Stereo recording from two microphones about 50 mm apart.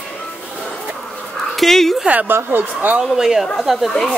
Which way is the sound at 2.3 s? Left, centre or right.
Right.